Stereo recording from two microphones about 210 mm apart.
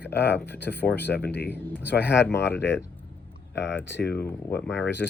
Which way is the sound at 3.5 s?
55° left (ahead or behind).